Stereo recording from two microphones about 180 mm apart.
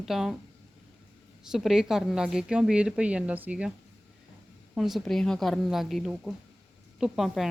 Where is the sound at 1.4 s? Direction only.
5° right (ahead or behind).